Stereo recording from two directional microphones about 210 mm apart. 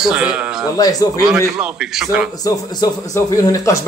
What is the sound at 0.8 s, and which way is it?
Speech, 15° left (ahead or behind).